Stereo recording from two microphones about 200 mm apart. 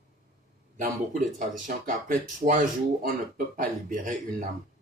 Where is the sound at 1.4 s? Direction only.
40° right (ahead or behind).